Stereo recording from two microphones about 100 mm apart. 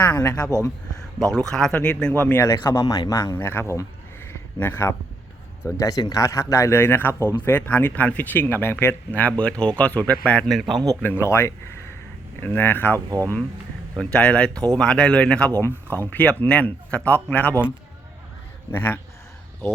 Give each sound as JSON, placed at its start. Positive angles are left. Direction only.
{"t": 1.3, "sound": "speech", "side_deg": 5}
{"t": 2.2, "sound": "a man's voice", "side_deg": 25}
{"t": 5.6, "sound": "a man's voice", "side_deg": 35}
{"t": 10.6, "sound": "speech", "side_deg": 0}
{"t": 11.0, "sound": "a man's voice", "side_deg": 25}
{"t": 13.1, "sound": "speech", "side_deg": -35}
{"t": 14.0, "sound": "speech", "side_deg": 10}
{"t": 18.7, "sound": "a man's voice", "side_deg": 20}